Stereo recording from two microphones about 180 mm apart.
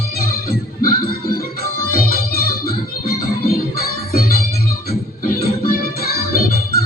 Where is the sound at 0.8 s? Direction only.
55° left (ahead or behind).